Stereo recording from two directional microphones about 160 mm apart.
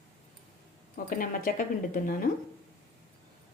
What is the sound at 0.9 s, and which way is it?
Speech, 60° left (ahead or behind).